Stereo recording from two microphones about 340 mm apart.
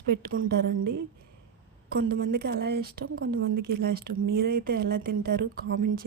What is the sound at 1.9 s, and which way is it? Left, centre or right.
Speech, right.